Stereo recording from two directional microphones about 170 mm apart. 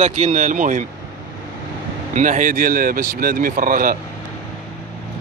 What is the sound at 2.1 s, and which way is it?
Speech, 45° right (ahead or behind).